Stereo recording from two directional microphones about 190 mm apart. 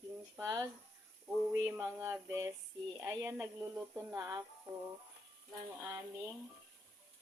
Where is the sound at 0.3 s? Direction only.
20° right (ahead or behind).